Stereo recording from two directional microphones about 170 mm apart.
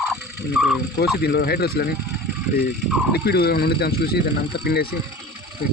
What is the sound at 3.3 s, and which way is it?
Speech, 70° left (ahead or behind).